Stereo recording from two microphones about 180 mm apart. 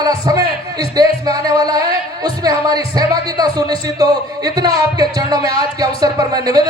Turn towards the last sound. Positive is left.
turn(degrees=-20)  # may be behind; listen again after turning